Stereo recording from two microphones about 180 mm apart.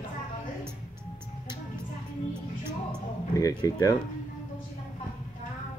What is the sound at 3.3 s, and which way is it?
Speech, 20° left (ahead or behind).